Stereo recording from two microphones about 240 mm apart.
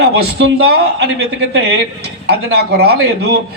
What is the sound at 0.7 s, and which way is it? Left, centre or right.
Speech, right.